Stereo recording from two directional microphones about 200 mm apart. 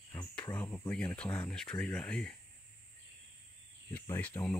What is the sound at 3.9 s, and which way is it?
Speech, 10° left (ahead or behind).